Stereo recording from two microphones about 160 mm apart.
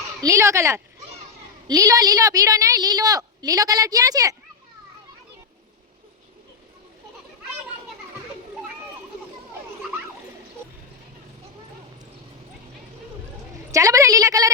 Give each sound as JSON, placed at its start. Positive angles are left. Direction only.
{"t": 0.2, "sound": "a woman's voice", "side_deg": -20}
{"t": 13.7, "sound": "a woman's voice", "side_deg": -20}